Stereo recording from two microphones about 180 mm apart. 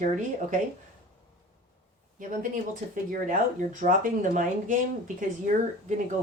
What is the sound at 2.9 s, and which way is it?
Speech, 50° right (ahead or behind).